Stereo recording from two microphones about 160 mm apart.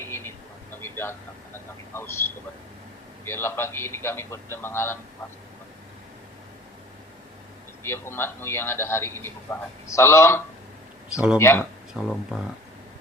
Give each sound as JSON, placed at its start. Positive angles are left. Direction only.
{"t": 0.0, "sound": "a sound", "side_deg": 15}
{"t": 0.8, "sound": "vehicle", "side_deg": 15}
{"t": 3.2, "sound": "a man's voice", "side_deg": 15}
{"t": 7.9, "sound": "a man's voice", "side_deg": 15}
{"t": 11.1, "sound": "speech", "side_deg": -5}
{"t": 11.3, "sound": "a man's voice", "side_deg": 15}
{"t": 11.9, "sound": "speech", "side_deg": 0}